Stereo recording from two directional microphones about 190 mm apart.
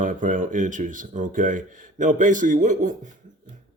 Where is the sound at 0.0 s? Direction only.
40° right (ahead or behind).